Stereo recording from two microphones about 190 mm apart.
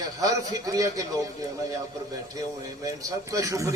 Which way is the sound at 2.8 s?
20° right (ahead or behind).